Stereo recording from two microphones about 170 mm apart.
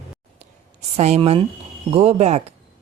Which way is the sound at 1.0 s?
35° right (ahead or behind).